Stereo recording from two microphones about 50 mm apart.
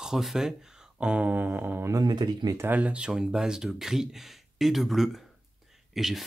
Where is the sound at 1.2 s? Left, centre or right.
Right.